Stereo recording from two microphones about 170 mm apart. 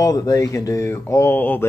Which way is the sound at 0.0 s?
20° left (ahead or behind).